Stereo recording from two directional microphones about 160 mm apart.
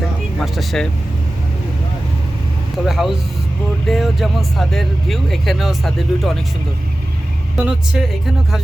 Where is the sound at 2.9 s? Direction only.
Centre (ahead or behind).